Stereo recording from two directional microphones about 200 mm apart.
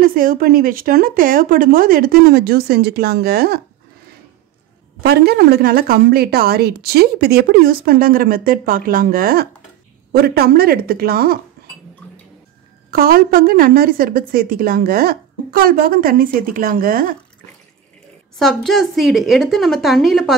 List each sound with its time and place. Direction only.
0.0 s a woman's voice: 45° right (ahead or behind)
5.0 s a woman's voice: 50° right (ahead or behind)
12.9 s a woman's voice: 45° right (ahead or behind)
18.4 s a woman's voice: centre (ahead or behind)